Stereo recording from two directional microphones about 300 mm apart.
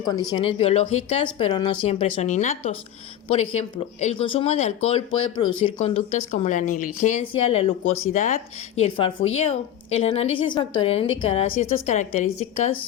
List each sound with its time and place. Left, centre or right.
0.1 s a woman's voice: centre